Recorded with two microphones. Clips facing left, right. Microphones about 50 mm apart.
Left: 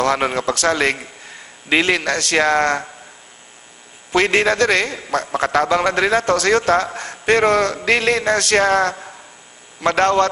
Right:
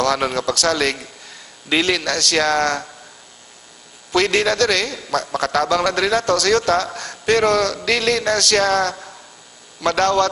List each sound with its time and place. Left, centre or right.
0.0 s a man's voice: left
4.1 s a man's voice: left